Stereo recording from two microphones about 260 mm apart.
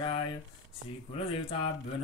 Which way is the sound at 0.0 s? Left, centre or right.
Centre.